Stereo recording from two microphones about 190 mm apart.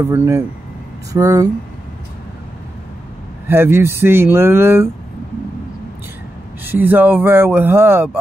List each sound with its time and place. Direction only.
0.0 s speech: 15° right (ahead or behind)
3.4 s speech: 10° right (ahead or behind)
6.6 s speech: 10° right (ahead or behind)